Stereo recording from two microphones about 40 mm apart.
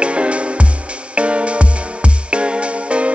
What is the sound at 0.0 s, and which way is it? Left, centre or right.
Music, right.